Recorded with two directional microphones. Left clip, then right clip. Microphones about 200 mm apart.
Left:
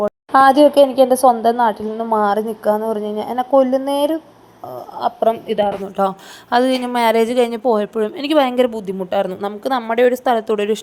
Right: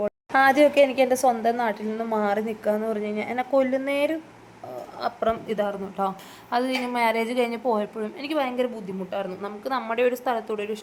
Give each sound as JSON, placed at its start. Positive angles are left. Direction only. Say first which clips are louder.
{"t": 0.0, "sound": "a sound", "louder": "left 8 dB", "side_deg": 5}
{"t": 0.5, "sound": "a woman's voice", "louder": "left 7 dB", "side_deg": 20}
{"t": 1.2, "sound": "a woman's voice", "louder": "left 9 dB", "side_deg": 0}
{"t": 3.5, "sound": "a woman's voice", "louder": "left 9 dB", "side_deg": 15}
{"t": 3.8, "sound": "a woman's voice", "louder": "left 7 dB", "side_deg": 0}
{"t": 4.9, "sound": "a woman's voice", "louder": "left 9 dB", "side_deg": 20}
{"t": 6.0, "sound": "a woman's voice", "louder": "left 9 dB", "side_deg": 35}